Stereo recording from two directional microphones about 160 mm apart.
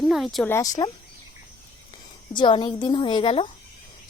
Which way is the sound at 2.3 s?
30° left (ahead or behind).